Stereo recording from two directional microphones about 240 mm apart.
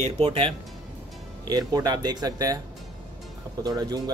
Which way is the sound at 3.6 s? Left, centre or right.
Centre.